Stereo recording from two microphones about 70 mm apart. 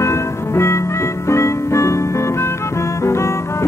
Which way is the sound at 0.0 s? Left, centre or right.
Left.